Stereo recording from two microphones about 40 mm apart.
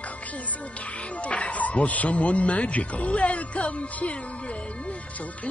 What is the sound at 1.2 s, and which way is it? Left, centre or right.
Speech, left.